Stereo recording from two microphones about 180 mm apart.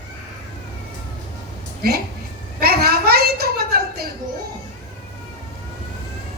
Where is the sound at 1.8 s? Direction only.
60° right (ahead or behind).